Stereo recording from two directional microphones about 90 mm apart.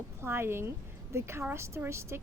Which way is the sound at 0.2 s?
25° right (ahead or behind).